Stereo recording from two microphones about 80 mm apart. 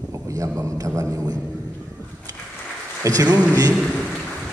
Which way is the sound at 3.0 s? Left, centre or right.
Right.